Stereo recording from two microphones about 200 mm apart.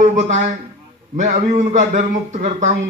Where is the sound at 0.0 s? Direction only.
35° right (ahead or behind).